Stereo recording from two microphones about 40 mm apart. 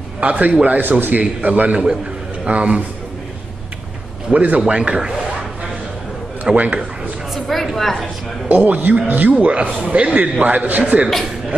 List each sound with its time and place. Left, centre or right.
0.2 s a man's voice: right
0.7 s a man's voice: right
4.3 s a man's voice: right
4.6 s a man's voice: right
6.5 s a man's voice: right
7.3 s a sound: centre
8.5 s a man's voice: right